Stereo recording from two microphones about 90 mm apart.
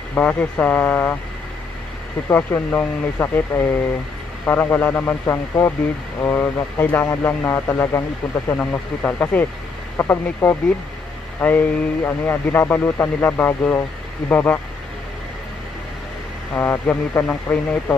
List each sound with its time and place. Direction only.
0.1 s speech: 15° left (ahead or behind)
2.2 s a man's voice: 25° left (ahead or behind)
8.5 s a man's voice: 15° left (ahead or behind)
16.5 s a man's voice: 25° left (ahead or behind)